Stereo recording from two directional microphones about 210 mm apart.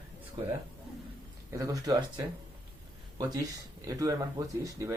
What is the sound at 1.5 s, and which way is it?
Speech, 15° right (ahead or behind).